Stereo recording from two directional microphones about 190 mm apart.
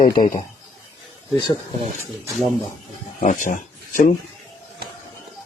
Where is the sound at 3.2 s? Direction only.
45° left (ahead or behind).